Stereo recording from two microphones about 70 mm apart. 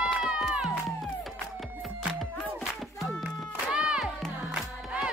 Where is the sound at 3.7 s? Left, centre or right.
Centre.